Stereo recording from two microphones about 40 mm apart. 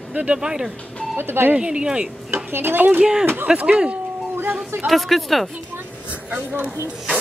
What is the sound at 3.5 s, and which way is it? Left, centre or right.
Speech, right.